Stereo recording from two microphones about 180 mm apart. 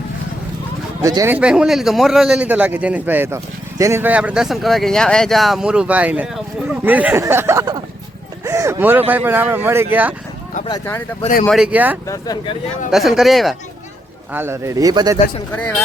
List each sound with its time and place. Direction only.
1.0 s a man's voice: 15° right (ahead or behind)
10.7 s speech: 15° left (ahead or behind)
11.4 s a man's voice: centre (ahead or behind)
12.0 s speech: 20° left (ahead or behind)
12.9 s speech: centre (ahead or behind)
14.3 s a man's voice: 15° right (ahead or behind)
15.5 s speech: 5° left (ahead or behind)